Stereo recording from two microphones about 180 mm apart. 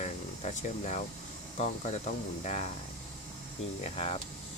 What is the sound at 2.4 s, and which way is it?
Speech, 40° left (ahead or behind).